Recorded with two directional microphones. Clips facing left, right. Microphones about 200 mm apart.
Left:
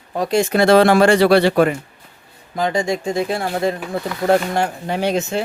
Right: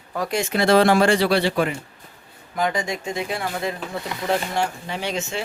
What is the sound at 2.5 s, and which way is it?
Speech, 30° left (ahead or behind).